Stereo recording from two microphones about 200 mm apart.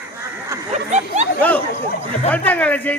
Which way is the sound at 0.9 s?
35° right (ahead or behind).